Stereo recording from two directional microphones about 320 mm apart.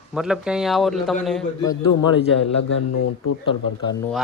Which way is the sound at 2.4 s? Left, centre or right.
Left.